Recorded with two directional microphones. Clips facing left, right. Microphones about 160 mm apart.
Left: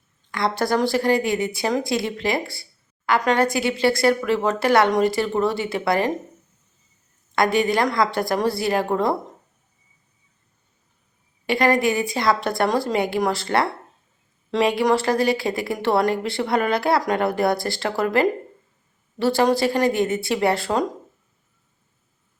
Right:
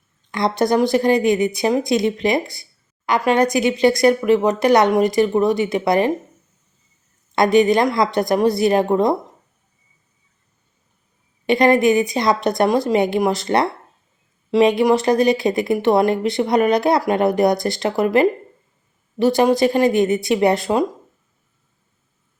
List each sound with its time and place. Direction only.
0.3 s speech: 20° right (ahead or behind)
7.3 s speech: 20° right (ahead or behind)
11.4 s speech: 20° right (ahead or behind)